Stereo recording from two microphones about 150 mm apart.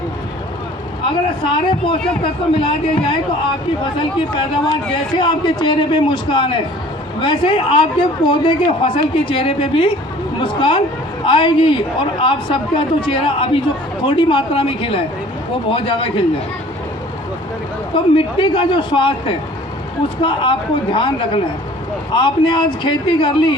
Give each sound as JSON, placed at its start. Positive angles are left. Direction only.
{"t": 1.0, "sound": "a man's voice", "side_deg": 35}
{"t": 17.9, "sound": "a man's voice", "side_deg": 35}